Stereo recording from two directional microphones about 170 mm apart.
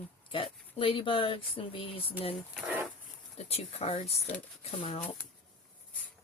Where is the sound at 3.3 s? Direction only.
35° left (ahead or behind).